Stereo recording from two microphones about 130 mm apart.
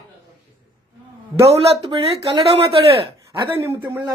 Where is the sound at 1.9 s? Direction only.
45° right (ahead or behind).